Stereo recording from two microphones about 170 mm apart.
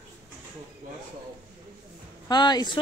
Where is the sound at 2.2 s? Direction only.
25° left (ahead or behind).